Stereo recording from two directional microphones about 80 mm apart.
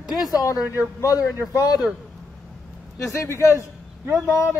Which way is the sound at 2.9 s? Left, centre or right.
Left.